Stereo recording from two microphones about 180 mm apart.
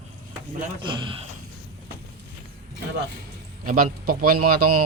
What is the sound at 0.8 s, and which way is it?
Speech, 25° right (ahead or behind).